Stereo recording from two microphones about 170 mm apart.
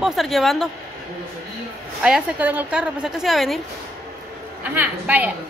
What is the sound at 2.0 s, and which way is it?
A woman's voice, 5° right (ahead or behind).